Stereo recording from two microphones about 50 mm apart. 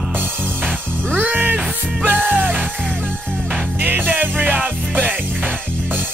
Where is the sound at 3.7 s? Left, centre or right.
Right.